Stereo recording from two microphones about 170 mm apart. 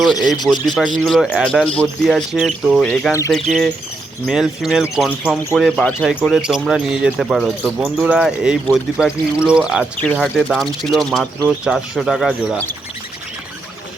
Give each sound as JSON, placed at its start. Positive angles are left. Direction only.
{"t": 0.2, "sound": "speech", "side_deg": 25}
{"t": 0.9, "sound": "speech", "side_deg": 0}
{"t": 3.1, "sound": "speech", "side_deg": 15}
{"t": 4.3, "sound": "speech", "side_deg": -5}